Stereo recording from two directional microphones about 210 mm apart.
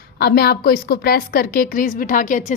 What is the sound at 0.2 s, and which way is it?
A woman's voice, 50° left (ahead or behind).